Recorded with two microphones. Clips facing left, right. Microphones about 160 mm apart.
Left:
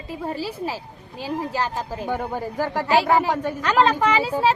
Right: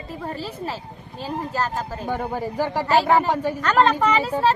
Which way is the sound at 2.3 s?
10° right (ahead or behind).